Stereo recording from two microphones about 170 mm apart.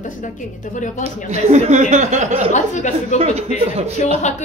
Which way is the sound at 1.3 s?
40° right (ahead or behind).